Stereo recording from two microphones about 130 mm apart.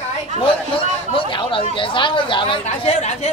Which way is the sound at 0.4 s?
40° left (ahead or behind).